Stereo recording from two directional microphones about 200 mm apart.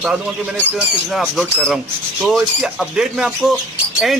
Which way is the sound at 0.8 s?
5° right (ahead or behind).